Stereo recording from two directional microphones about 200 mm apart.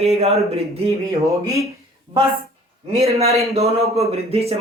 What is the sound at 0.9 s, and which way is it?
Speech, 15° right (ahead or behind).